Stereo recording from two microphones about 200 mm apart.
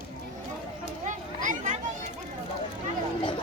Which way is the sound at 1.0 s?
40° right (ahead or behind).